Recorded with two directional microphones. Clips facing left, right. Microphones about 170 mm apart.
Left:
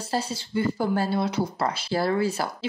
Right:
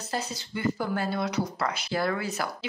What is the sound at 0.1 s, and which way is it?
A woman's voice, 30° left (ahead or behind).